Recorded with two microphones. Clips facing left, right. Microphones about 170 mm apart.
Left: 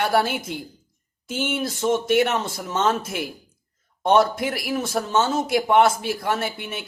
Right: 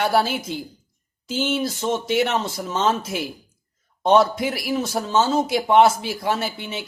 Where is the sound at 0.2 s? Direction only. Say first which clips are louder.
Right 1 dB; 55° left (ahead or behind).